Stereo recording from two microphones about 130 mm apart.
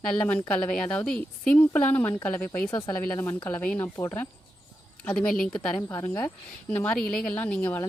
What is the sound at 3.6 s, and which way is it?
Speech, 10° left (ahead or behind).